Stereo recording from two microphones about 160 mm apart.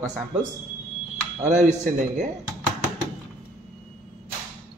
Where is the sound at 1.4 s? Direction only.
45° right (ahead or behind).